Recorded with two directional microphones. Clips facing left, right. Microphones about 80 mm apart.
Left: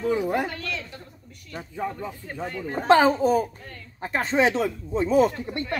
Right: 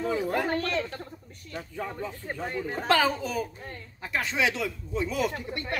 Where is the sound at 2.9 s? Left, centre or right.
Left.